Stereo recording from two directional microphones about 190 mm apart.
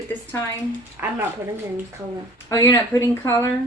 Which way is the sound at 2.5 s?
15° left (ahead or behind).